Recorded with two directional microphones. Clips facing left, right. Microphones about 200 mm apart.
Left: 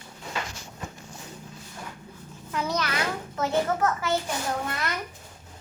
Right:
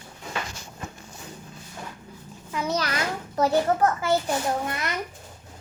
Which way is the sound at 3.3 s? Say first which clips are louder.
Right 4 dB; 35° right (ahead or behind).